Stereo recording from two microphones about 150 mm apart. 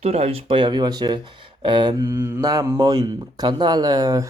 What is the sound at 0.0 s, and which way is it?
Speech, 45° right (ahead or behind).